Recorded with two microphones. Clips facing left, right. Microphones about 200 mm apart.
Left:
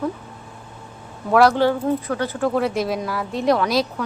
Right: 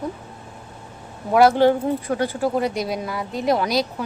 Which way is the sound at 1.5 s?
20° right (ahead or behind).